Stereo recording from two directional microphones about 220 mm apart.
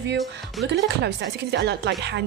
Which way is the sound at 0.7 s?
50° right (ahead or behind).